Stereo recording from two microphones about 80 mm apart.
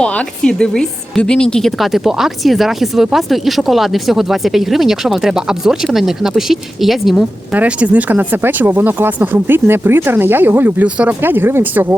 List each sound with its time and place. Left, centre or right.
0.0 s a woman's voice: centre
7.5 s speech: centre
10.8 s speech: centre
11.2 s speech: right